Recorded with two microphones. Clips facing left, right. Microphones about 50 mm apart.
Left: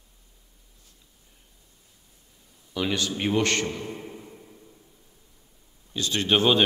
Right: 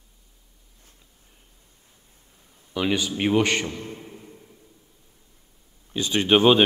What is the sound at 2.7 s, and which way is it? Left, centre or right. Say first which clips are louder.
Speech: right 3 dB; centre.